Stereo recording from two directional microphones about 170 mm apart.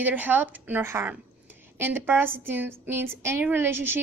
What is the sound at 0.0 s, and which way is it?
A woman's voice, 10° right (ahead or behind).